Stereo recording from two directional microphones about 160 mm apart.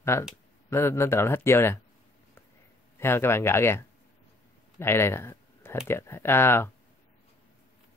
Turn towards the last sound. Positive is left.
turn(degrees=15)  # may be behind; listen again after turning